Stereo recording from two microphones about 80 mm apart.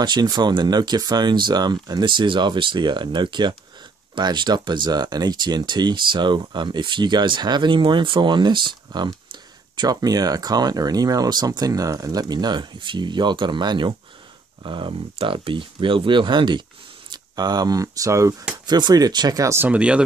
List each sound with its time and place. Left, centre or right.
0.0 s speech: right
9.8 s speech: right
14.6 s speech: right
17.1 s speech: right
18.7 s speech: right
19.4 s speech: right
19.7 s speech: centre